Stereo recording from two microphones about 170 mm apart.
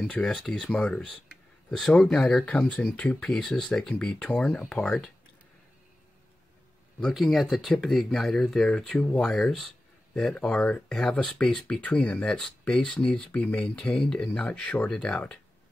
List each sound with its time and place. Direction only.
0.0 s speech: 5° left (ahead or behind)
7.0 s speech: centre (ahead or behind)